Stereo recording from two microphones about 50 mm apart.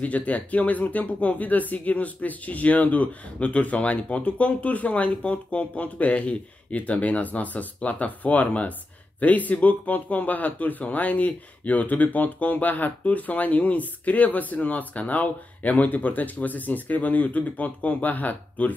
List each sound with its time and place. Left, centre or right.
0.0 s speech: left